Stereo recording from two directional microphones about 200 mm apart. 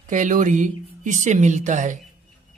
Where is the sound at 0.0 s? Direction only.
40° right (ahead or behind).